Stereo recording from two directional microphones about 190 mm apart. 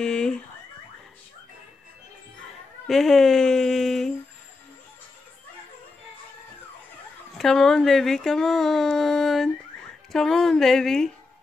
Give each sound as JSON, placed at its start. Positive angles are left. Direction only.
{"t": 0.0, "sound": "car alarm", "side_deg": 5}
{"t": 2.9, "sound": "speech", "side_deg": 0}
{"t": 7.3, "sound": "speech", "side_deg": 0}